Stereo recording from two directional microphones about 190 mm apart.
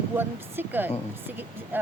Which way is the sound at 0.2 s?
10° right (ahead or behind).